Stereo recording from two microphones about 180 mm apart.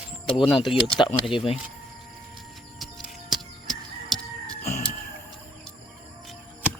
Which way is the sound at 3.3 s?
Centre (ahead or behind).